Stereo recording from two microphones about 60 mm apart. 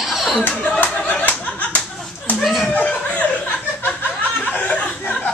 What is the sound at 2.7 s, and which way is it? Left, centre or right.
Chuckle, centre.